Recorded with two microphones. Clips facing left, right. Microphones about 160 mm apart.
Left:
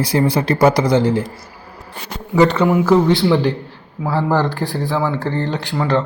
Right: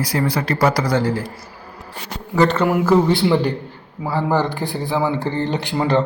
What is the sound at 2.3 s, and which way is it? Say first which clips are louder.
Speech: left 3 dB; 10° left (ahead or behind).